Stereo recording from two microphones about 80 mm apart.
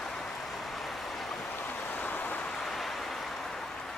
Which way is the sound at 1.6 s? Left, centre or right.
Left.